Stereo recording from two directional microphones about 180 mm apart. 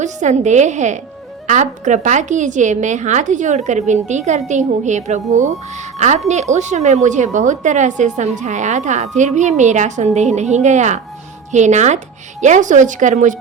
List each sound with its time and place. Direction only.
0.0 s a woman's voice: 40° right (ahead or behind)